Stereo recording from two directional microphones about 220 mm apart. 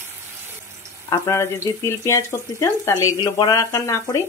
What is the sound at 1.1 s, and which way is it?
Speech, 10° left (ahead or behind).